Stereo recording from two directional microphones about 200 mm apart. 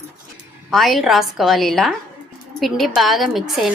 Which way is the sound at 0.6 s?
Centre (ahead or behind).